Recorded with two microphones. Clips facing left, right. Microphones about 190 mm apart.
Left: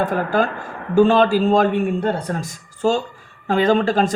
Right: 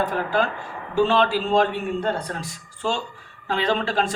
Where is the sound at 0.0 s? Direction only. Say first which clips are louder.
Left 4 dB; 50° left (ahead or behind).